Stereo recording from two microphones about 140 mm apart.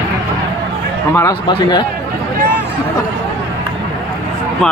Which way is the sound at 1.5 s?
35° left (ahead or behind).